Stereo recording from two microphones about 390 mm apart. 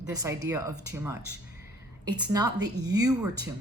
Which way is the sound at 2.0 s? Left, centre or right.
Centre.